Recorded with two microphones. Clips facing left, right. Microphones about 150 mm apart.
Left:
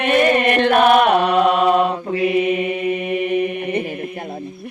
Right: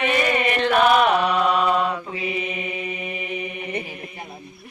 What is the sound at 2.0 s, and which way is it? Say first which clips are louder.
Mantra: left 11 dB; 60° left (ahead or behind).